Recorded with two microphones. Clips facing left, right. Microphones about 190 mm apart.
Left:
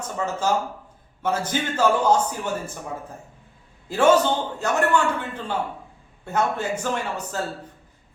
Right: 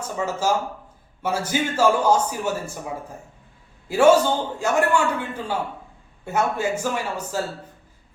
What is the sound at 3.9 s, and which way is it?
A man's voice, 10° right (ahead or behind).